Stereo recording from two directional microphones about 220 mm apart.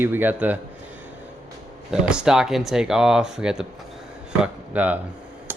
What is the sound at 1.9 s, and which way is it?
Speech, 5° right (ahead or behind).